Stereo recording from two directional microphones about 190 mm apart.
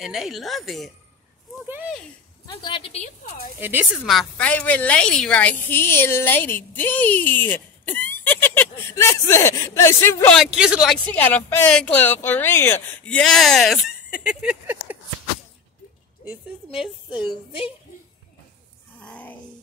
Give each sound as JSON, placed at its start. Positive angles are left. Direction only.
{"t": 0.0, "sound": "speech", "side_deg": 0}
{"t": 2.4, "sound": "a woman's voice", "side_deg": 25}
{"t": 3.6, "sound": "a woman's voice", "side_deg": -10}
{"t": 4.1, "sound": "a woman's voice", "side_deg": 5}
{"t": 10.4, "sound": "speech", "side_deg": -5}
{"t": 16.3, "sound": "a woman's voice", "side_deg": -5}
{"t": 18.9, "sound": "a sound", "side_deg": 5}